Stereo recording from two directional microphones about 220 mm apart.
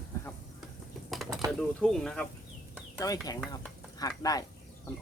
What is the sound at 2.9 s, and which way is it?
Speech, 15° left (ahead or behind).